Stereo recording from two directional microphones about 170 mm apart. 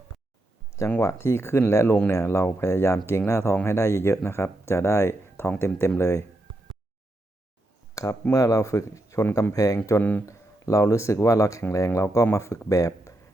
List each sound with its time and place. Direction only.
0.8 s speech: 15° left (ahead or behind)
7.9 s speech: 20° left (ahead or behind)